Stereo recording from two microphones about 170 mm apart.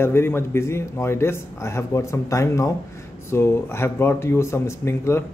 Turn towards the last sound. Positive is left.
turn(degrees=15)  # may be behind; listen again after turning